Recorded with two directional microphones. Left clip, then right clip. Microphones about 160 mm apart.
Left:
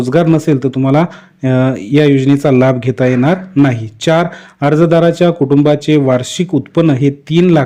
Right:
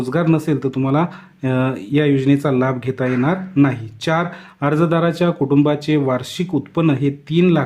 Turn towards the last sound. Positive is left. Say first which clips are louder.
# left 6 dB
turn(degrees=30)  # may be behind; listen again after turning